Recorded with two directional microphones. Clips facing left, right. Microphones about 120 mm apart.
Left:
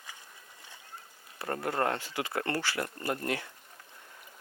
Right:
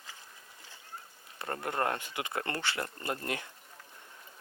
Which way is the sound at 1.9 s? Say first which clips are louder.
Left 2 dB; 20° right (ahead or behind).